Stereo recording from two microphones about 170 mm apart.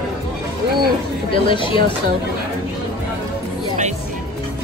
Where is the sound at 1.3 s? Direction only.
30° left (ahead or behind).